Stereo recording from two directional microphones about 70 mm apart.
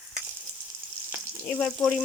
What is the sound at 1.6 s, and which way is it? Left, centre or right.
Frying, centre.